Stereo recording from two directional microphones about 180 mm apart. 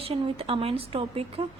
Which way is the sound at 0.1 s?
30° right (ahead or behind).